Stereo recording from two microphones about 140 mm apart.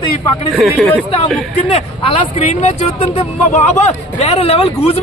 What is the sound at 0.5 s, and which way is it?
Speech, centre (ahead or behind).